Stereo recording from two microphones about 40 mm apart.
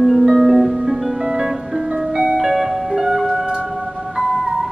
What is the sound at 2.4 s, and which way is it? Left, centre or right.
Music, centre.